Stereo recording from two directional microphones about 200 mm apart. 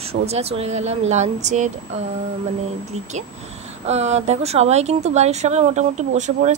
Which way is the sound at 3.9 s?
35° right (ahead or behind).